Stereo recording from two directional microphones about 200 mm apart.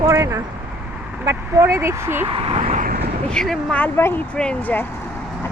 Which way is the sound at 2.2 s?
25° right (ahead or behind).